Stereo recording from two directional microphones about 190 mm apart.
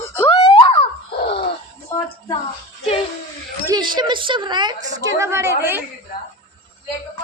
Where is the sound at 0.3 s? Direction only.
30° left (ahead or behind).